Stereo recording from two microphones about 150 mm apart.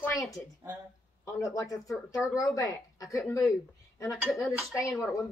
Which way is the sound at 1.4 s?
20° left (ahead or behind).